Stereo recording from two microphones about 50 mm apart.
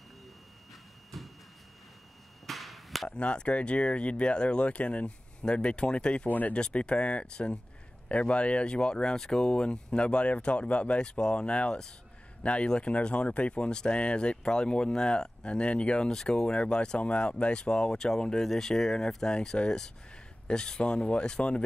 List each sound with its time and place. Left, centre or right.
1.1 s a sound: centre
2.4 s chop: centre
3.1 s speech: left
6.2 s speech: left
6.5 s speech: left